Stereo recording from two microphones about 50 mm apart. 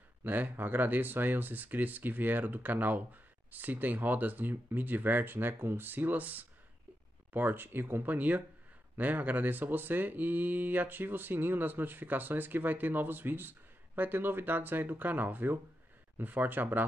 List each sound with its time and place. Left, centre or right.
0.2 s speech: right